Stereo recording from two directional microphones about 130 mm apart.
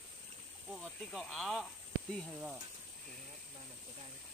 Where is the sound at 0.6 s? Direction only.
Centre (ahead or behind).